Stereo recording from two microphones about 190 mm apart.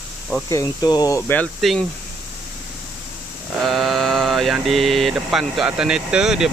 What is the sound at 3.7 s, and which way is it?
Speech, centre (ahead or behind).